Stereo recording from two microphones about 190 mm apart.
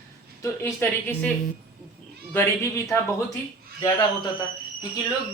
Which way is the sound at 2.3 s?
15° left (ahead or behind).